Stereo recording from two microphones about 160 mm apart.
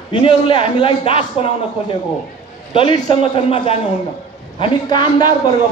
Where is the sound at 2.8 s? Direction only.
35° left (ahead or behind).